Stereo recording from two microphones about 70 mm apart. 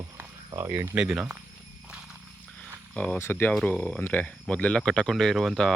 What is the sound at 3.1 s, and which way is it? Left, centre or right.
Speech, left.